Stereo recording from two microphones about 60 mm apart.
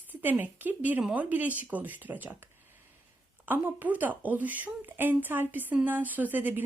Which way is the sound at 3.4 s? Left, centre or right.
Right.